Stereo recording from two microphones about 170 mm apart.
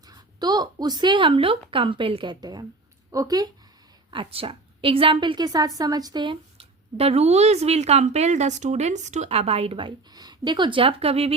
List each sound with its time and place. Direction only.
0.1 s a woman's voice: 25° right (ahead or behind)
4.1 s a woman's voice: 30° right (ahead or behind)